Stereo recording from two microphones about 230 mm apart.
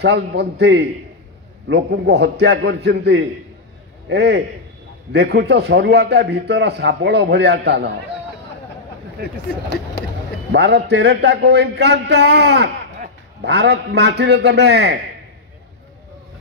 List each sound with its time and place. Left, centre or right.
0.0 s a man's voice: right
10.5 s a man's voice: right